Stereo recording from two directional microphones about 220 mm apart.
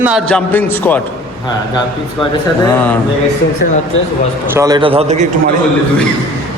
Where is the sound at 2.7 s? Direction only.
10° left (ahead or behind).